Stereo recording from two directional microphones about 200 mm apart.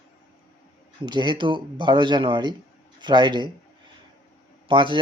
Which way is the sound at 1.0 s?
20° right (ahead or behind).